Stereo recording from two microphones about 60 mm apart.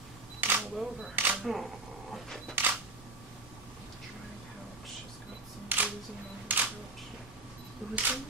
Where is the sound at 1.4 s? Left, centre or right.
Centre.